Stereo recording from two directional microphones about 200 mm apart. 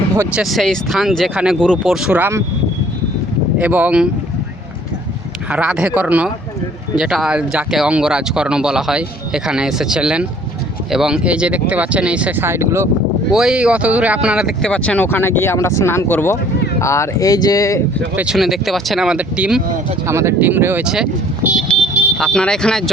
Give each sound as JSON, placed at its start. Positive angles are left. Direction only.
{"t": 0.2, "sound": "speech", "side_deg": -5}
{"t": 3.6, "sound": "speech", "side_deg": -5}
{"t": 5.5, "sound": "speech", "side_deg": -5}
{"t": 18.2, "sound": "speech", "side_deg": -5}